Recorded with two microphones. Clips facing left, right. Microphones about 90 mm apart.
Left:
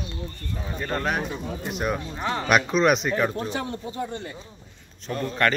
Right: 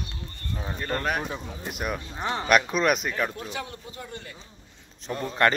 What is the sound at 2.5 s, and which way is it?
Speech, centre (ahead or behind).